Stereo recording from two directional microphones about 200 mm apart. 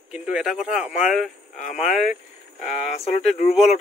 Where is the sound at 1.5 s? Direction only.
40° left (ahead or behind).